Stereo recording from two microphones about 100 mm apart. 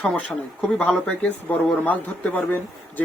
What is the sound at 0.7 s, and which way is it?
A man's voice, 10° left (ahead or behind).